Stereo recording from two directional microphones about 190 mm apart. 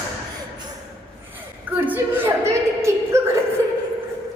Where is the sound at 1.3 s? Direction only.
10° right (ahead or behind).